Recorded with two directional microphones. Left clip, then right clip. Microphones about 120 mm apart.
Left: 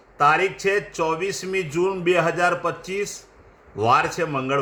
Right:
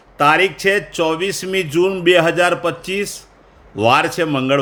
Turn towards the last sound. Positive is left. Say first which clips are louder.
# right 7 dB
turn(degrees=-15)  # may be behind; listen again after turning